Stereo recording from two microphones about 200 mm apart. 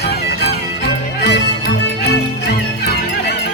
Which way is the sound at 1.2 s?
55° left (ahead or behind).